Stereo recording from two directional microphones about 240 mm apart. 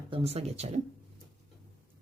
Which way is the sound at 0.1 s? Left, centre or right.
Right.